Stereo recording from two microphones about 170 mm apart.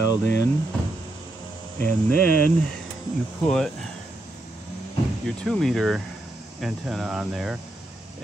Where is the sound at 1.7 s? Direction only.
55° right (ahead or behind).